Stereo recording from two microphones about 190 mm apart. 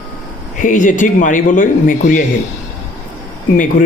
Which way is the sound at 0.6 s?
45° left (ahead or behind).